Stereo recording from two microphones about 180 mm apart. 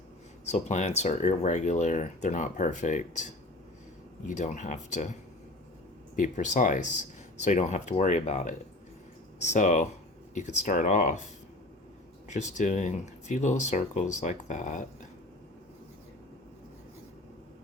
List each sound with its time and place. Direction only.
0.4 s speech: 40° left (ahead or behind)
6.1 s speech: 45° left (ahead or behind)
12.3 s speech: 40° left (ahead or behind)